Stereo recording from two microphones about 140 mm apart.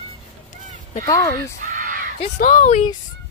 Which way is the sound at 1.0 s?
25° left (ahead or behind).